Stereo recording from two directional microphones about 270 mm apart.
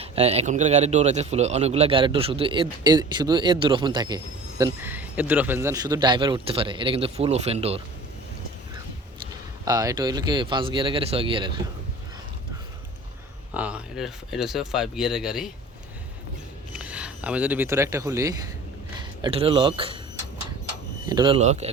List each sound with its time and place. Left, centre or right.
0.0 s a man's voice: right
9.6 s speech: centre
13.5 s speech: centre
16.7 s speech: centre
21.1 s a man's voice: centre